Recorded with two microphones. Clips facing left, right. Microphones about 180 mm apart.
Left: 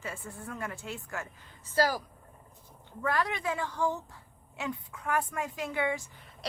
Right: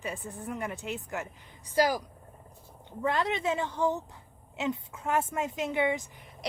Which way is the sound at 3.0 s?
25° right (ahead or behind).